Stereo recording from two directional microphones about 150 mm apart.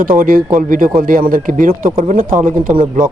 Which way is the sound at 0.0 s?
70° right (ahead or behind).